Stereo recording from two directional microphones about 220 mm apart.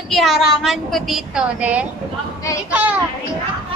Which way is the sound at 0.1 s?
Centre (ahead or behind).